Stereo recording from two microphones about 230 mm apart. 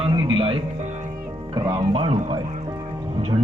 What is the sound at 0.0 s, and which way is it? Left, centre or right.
Music, centre.